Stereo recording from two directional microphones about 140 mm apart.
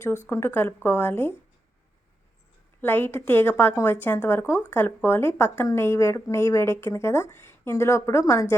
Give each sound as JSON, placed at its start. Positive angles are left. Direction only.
{"t": 0.3, "sound": "speech", "side_deg": 15}
{"t": 2.8, "sound": "speech", "side_deg": 15}